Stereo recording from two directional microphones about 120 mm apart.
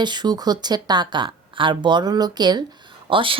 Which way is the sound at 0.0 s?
40° right (ahead or behind).